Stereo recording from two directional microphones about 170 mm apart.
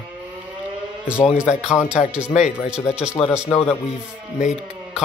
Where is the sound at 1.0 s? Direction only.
5° right (ahead or behind).